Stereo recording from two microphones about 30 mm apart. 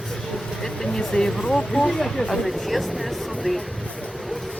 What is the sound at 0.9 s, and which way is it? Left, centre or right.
Speech, left.